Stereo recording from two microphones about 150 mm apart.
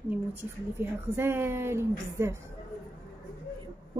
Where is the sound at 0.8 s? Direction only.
15° right (ahead or behind).